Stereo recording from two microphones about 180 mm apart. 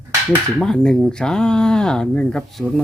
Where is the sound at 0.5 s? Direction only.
5° left (ahead or behind).